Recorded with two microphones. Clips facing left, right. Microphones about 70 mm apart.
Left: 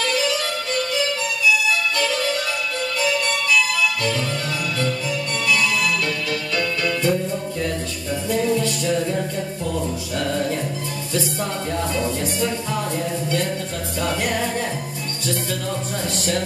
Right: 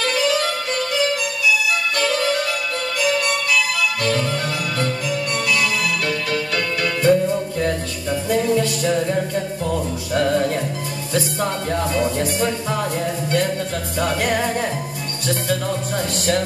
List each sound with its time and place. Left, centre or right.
4.0 s music: right
5.1 s music: right
6.5 s music: right
10.1 s music: right
11.9 s music: right
13.9 s music: right